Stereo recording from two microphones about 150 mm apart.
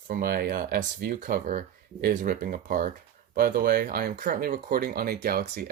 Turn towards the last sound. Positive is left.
turn(degrees=-85)